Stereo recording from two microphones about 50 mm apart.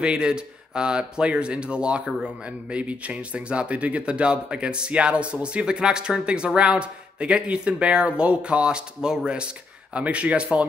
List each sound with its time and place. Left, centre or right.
0.0 s speech: centre